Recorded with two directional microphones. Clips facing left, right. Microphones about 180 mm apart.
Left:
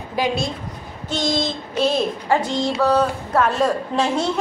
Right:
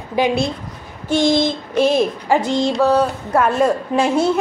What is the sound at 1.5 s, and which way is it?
A woman's voice, 10° right (ahead or behind).